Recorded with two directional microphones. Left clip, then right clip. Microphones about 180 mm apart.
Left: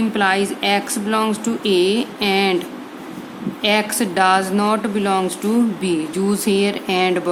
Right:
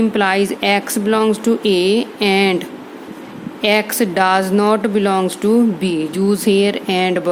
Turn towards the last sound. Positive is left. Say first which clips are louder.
# right 1 dB
turn(degrees=-30)  # may be behind; listen again after turning